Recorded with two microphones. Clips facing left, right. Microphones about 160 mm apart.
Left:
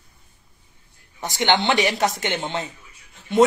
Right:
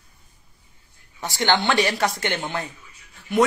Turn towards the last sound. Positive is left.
turn(degrees=25)  # may be behind; listen again after turning